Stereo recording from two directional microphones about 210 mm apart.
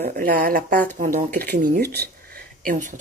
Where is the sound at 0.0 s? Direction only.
45° right (ahead or behind).